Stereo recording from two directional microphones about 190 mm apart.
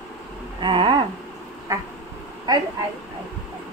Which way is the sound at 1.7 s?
15° right (ahead or behind).